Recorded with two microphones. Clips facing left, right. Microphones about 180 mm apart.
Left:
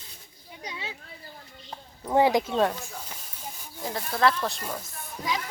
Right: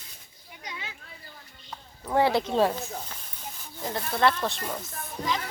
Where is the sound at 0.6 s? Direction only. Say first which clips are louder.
Left 3 dB; 30° left (ahead or behind).